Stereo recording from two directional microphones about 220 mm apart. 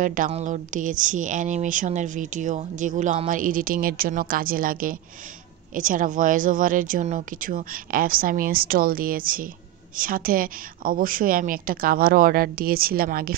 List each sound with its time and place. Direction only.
0.0 s a woman's voice: 35° right (ahead or behind)